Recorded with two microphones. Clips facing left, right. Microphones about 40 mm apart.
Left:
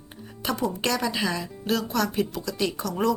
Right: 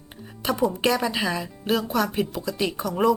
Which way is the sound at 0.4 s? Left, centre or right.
Centre.